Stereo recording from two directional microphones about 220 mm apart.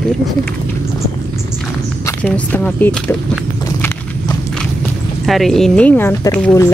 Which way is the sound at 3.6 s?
15° left (ahead or behind).